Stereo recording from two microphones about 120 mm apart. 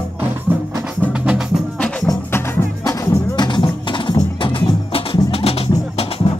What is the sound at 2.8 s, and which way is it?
Music, 25° left (ahead or behind).